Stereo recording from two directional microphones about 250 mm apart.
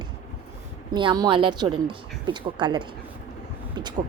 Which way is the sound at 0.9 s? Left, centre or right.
Centre.